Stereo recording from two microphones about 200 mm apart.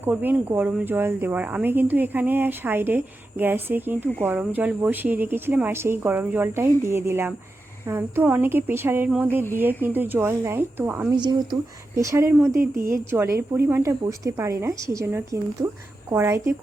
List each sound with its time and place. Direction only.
0.0 s speech: 10° right (ahead or behind)
11.1 s speech: 20° right (ahead or behind)